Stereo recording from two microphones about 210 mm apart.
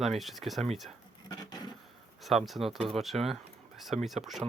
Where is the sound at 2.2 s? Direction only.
Centre (ahead or behind).